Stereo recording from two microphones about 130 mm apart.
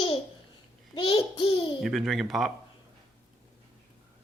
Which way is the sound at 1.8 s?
Centre (ahead or behind).